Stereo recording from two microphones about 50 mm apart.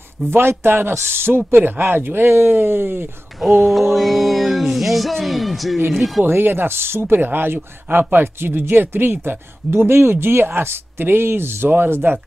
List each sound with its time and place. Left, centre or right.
0.3 s speech: right
3.3 s a sound: centre
6.2 s speech: right